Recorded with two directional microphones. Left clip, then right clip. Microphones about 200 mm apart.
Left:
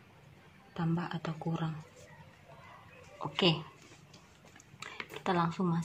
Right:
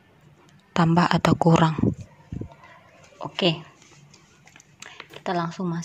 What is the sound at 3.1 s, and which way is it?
Speech, 20° right (ahead or behind).